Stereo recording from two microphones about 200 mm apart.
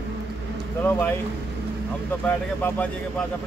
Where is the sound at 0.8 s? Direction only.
10° left (ahead or behind).